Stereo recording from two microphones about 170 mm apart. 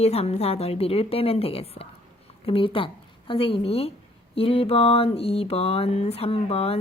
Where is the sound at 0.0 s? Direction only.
40° left (ahead or behind).